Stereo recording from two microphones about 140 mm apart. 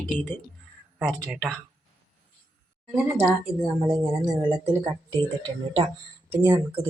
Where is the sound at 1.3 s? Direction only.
10° right (ahead or behind).